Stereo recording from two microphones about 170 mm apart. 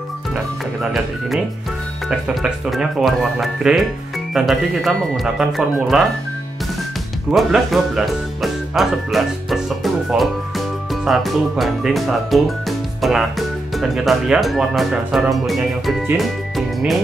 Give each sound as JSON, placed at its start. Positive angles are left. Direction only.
{"t": 2.0, "sound": "speech", "side_deg": -5}
{"t": 7.2, "sound": "speech", "side_deg": 0}